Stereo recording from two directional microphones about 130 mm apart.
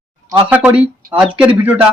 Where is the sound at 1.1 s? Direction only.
10° right (ahead or behind).